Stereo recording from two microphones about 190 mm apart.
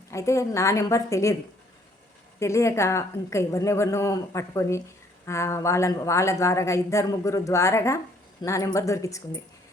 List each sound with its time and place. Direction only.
0.1 s speech: 15° left (ahead or behind)
2.4 s speech: 15° left (ahead or behind)